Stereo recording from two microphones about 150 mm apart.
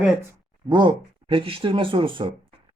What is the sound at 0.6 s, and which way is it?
Speech, 30° right (ahead or behind).